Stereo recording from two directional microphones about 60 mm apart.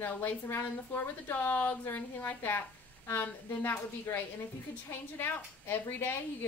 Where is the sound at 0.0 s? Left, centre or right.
Left.